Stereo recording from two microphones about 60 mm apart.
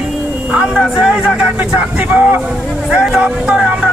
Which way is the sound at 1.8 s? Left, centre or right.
Right.